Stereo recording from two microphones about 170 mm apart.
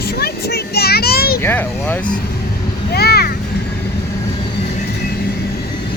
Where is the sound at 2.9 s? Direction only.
70° left (ahead or behind).